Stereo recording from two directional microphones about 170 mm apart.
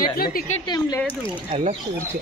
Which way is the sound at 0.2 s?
55° left (ahead or behind).